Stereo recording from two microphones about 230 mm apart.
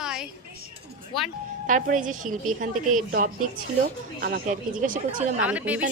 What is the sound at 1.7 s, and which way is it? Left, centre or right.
Speech, right.